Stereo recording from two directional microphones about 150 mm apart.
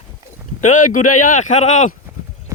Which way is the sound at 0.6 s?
55° left (ahead or behind).